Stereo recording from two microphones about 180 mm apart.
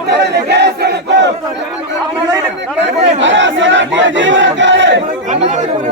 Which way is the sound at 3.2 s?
90° right.